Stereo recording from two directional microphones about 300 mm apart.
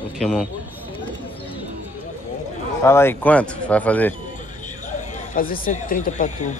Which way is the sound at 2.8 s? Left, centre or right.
Centre.